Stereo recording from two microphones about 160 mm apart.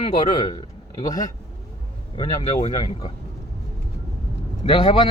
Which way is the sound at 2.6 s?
35° left (ahead or behind).